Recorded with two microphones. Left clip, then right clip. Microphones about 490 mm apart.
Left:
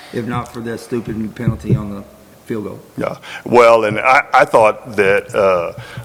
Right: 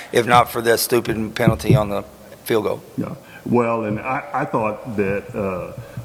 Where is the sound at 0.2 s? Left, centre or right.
Right.